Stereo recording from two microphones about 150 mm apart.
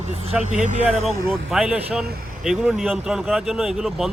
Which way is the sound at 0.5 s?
55° right (ahead or behind).